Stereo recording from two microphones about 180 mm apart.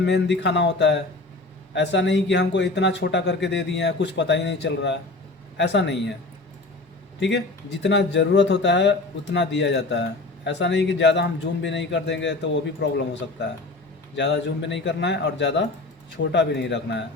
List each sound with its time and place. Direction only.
0.0 s a man's voice: 75° left (ahead or behind)
7.2 s a man's voice: 75° left (ahead or behind)